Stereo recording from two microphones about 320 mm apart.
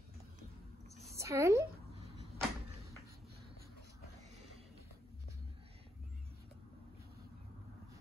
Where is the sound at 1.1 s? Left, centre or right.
Centre.